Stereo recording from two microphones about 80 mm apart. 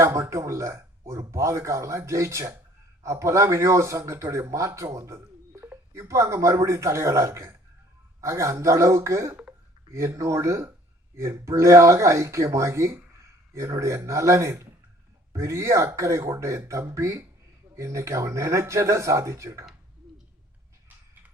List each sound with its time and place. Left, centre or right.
0.0 s speech: right
9.3 s a sound: centre
9.9 s speech: right